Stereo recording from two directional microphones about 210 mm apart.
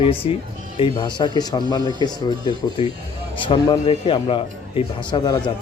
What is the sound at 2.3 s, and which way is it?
Speech, 20° right (ahead or behind).